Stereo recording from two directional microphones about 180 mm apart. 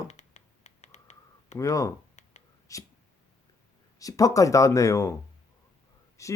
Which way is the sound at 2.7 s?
15° left (ahead or behind).